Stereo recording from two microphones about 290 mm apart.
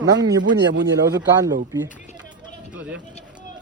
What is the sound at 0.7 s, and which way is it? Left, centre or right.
Speech, right.